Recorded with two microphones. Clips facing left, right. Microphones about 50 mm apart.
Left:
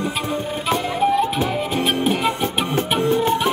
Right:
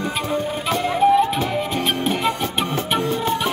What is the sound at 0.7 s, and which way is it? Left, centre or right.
Music, centre.